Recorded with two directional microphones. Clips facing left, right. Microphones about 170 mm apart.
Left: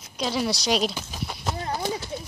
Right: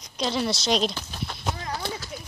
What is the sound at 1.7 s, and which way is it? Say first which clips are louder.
Horse: left 4 dB; 20° left (ahead or behind).